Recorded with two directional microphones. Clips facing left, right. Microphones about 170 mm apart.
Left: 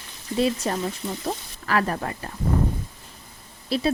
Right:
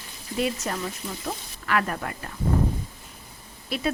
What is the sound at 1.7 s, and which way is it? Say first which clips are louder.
Speech: left 2 dB; 35° left (ahead or behind).